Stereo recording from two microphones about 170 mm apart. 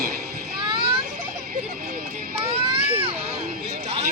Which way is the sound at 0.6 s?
30° right (ahead or behind).